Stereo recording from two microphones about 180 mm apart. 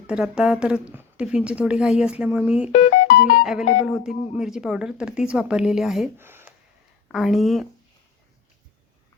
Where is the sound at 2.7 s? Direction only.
45° left (ahead or behind).